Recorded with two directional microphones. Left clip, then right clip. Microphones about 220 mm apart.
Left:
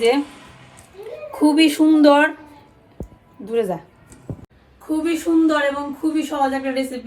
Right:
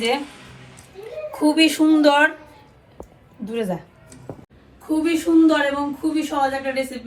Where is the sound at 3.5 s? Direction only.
45° left (ahead or behind).